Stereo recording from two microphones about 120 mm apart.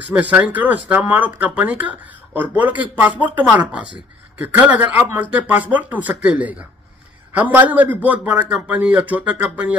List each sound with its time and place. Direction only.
0.1 s speech: 15° right (ahead or behind)
7.5 s speech: 15° right (ahead or behind)